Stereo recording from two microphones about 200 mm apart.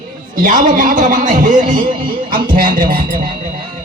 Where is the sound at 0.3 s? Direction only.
40° right (ahead or behind).